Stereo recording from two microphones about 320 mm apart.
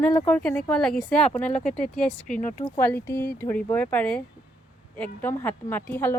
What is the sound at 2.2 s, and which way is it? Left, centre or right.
Speech, left.